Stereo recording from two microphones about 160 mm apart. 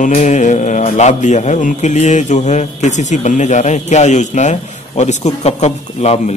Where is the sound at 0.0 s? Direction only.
50° left (ahead or behind).